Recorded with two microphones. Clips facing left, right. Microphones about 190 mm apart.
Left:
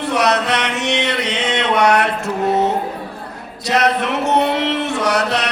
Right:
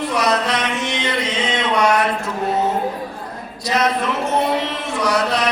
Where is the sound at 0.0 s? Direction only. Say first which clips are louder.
Left 2 dB; 70° left (ahead or behind).